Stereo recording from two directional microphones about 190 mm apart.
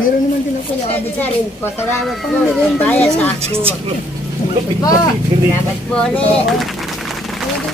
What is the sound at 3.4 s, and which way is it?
Speech, 30° right (ahead or behind).